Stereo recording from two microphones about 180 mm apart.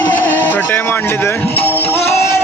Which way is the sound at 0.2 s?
10° left (ahead or behind).